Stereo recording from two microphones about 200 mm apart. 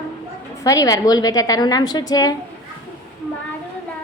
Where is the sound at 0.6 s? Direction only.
15° left (ahead or behind).